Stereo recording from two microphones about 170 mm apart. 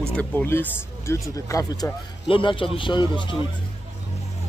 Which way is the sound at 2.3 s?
30° left (ahead or behind).